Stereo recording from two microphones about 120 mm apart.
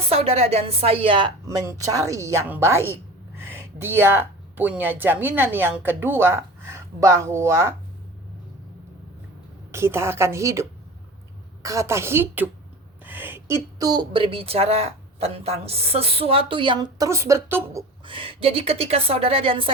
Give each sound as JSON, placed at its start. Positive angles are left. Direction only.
{"t": 0.1, "sound": "speech", "side_deg": -55}
{"t": 1.5, "sound": "a woman's voice", "side_deg": -25}
{"t": 9.7, "sound": "a woman's voice", "side_deg": -20}
{"t": 13.1, "sound": "a sound", "side_deg": -15}
{"t": 13.7, "sound": "speech", "side_deg": -35}
{"t": 17.0, "sound": "a woman's voice", "side_deg": -25}
{"t": 18.0, "sound": "a woman's voice", "side_deg": -45}